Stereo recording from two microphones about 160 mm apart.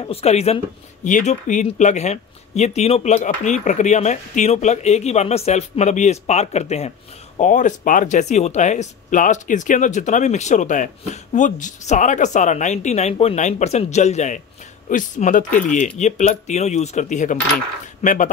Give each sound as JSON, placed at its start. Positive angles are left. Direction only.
{"t": 0.0, "sound": "speech", "side_deg": 40}